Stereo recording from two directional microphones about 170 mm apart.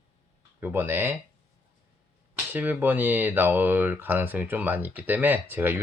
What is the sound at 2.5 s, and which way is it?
Speech, 10° right (ahead or behind).